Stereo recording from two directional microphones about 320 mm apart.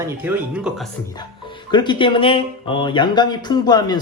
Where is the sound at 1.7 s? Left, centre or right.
Centre.